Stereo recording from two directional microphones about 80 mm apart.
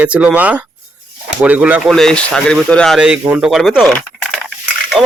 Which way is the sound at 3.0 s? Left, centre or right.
Centre.